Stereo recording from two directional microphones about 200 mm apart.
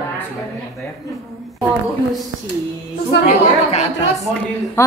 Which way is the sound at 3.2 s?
35° left (ahead or behind).